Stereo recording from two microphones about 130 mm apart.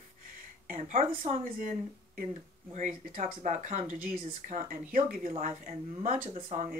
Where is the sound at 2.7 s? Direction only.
75° right (ahead or behind).